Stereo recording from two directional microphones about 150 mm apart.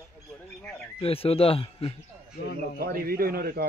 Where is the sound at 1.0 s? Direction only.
40° left (ahead or behind).